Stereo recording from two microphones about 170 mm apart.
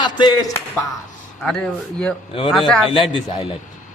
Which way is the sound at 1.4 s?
5° left (ahead or behind).